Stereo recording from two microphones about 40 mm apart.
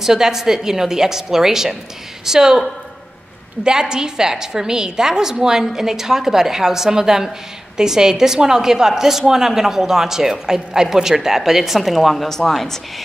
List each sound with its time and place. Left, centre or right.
0.0 s a woman's voice: centre
3.6 s a woman's voice: left
3.9 s a woman's voice: centre